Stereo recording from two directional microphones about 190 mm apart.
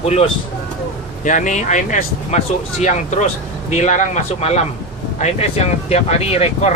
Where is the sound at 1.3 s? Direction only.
40° left (ahead or behind).